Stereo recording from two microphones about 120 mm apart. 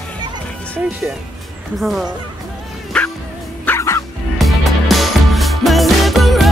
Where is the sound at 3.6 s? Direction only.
20° left (ahead or behind).